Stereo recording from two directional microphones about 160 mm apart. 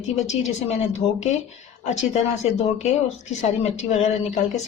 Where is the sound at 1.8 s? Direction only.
45° left (ahead or behind).